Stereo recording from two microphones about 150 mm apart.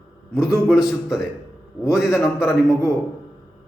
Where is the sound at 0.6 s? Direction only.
5° right (ahead or behind).